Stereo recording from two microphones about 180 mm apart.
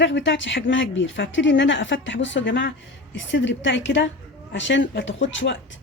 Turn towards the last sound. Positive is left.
turn(degrees=90)